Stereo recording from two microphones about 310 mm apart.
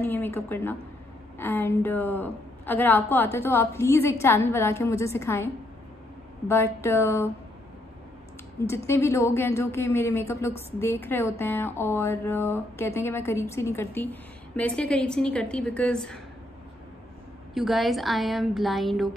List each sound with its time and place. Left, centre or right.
0.0 s a woman's voice: centre
8.6 s a woman's voice: centre
17.6 s a woman's voice: centre